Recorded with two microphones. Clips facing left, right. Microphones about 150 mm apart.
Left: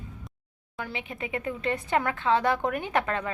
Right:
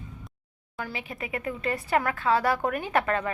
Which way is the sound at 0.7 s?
20° left (ahead or behind).